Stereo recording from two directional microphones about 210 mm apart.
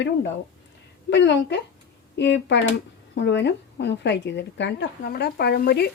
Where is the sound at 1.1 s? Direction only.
55° left (ahead or behind).